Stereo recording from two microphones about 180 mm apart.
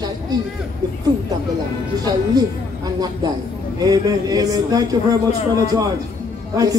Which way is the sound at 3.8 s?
20° right (ahead or behind).